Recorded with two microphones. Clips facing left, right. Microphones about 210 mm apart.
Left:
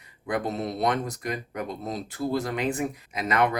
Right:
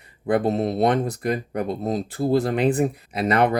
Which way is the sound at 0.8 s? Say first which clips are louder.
Right 4 dB; 30° right (ahead or behind).